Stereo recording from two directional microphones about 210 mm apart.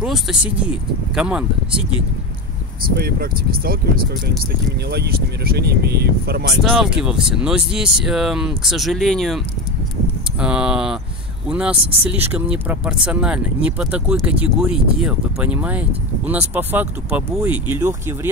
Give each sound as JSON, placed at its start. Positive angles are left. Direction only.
{"t": 0.0, "sound": "speech", "side_deg": 0}
{"t": 3.0, "sound": "speech", "side_deg": -45}
{"t": 4.8, "sound": "speech", "side_deg": -50}
{"t": 6.6, "sound": "speech", "side_deg": -5}
{"t": 10.4, "sound": "speech", "side_deg": -5}